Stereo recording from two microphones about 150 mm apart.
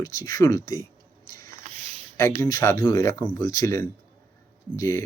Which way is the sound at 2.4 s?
20° left (ahead or behind).